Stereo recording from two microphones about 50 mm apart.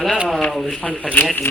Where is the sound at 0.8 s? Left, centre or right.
Left.